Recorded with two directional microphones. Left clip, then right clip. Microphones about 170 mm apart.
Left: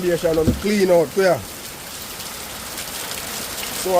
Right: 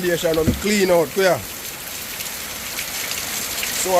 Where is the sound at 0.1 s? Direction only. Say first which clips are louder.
Left 1 dB; 10° right (ahead or behind).